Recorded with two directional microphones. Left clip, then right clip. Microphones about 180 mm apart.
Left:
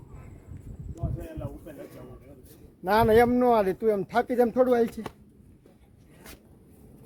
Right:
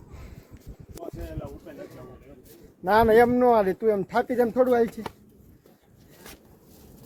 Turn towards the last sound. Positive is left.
turn(degrees=0)  # may be behind; listen again after turning